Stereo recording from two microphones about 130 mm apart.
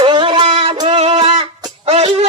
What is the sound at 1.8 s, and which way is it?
Music, 50° right (ahead or behind).